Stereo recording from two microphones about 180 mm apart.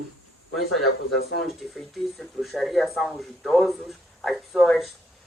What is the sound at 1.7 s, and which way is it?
Speech, centre (ahead or behind).